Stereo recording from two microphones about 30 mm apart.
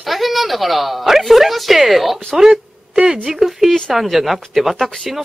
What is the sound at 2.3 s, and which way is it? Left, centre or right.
Speech, right.